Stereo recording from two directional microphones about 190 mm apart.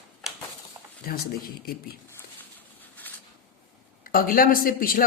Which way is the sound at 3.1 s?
10° left (ahead or behind).